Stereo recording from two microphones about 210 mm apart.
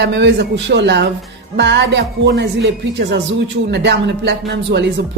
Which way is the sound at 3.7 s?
55° right (ahead or behind).